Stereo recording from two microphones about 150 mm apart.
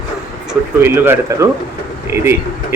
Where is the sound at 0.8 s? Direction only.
15° right (ahead or behind).